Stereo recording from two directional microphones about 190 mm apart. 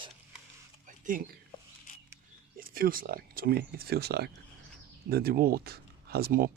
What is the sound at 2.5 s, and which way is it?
Speech, 50° right (ahead or behind).